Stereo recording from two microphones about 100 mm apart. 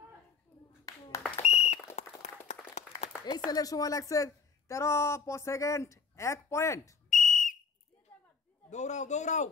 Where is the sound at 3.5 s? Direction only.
40° left (ahead or behind).